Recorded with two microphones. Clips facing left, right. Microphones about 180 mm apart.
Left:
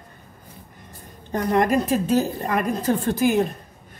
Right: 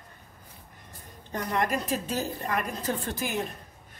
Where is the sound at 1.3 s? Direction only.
55° left (ahead or behind).